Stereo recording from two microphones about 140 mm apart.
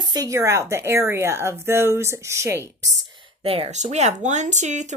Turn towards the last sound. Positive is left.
turn(degrees=-60)  # may be behind; listen again after turning